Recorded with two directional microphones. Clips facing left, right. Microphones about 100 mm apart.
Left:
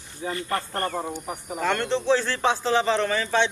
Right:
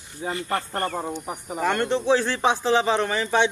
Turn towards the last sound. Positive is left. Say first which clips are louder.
# right 1 dB
turn(degrees=-15)  # may be behind; listen again after turning